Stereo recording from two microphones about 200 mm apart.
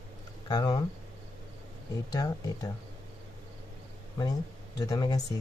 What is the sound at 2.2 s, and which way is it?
Speech, 20° left (ahead or behind).